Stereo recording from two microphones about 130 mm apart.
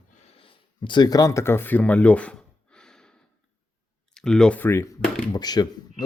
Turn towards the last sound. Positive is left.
turn(degrees=30)  # may be behind; listen again after turning